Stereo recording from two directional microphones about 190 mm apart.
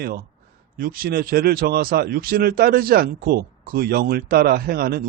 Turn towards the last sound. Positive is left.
turn(degrees=-55)  # may be behind; listen again after turning